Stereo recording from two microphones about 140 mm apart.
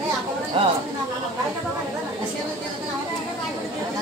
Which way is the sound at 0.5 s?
40° right (ahead or behind).